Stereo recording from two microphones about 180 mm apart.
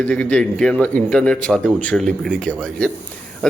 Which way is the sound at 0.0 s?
5° left (ahead or behind).